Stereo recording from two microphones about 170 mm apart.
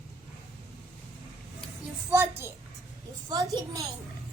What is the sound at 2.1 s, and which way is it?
A child's voice, 15° right (ahead or behind).